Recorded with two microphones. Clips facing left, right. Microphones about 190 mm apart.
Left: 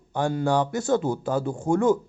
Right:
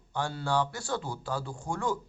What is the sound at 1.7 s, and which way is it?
Speech, 20° left (ahead or behind).